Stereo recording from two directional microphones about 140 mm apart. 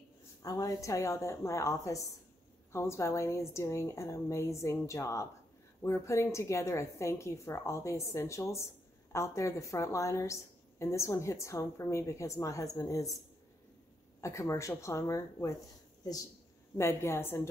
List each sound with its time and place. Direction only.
0.4 s a woman's voice: 25° left (ahead or behind)
14.2 s a woman's voice: 20° left (ahead or behind)
16.7 s a woman's voice: 20° left (ahead or behind)